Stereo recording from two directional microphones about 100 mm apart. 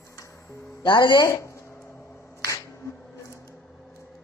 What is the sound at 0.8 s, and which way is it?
Speech, 50° left (ahead or behind).